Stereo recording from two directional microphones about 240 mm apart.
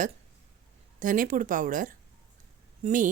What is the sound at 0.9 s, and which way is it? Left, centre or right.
A woman's voice, right.